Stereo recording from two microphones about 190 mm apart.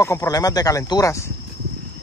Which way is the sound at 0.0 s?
15° left (ahead or behind).